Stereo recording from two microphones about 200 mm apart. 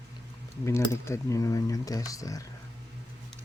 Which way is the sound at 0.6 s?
15° left (ahead or behind).